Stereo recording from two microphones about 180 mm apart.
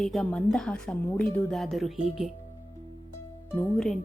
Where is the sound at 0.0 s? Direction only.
Centre (ahead or behind).